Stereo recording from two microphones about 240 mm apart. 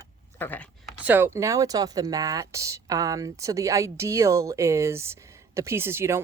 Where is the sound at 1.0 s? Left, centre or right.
Centre.